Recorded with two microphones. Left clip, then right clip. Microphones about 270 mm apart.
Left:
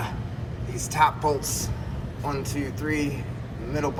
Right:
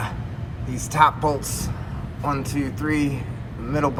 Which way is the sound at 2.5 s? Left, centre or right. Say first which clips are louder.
Right 4 dB; left.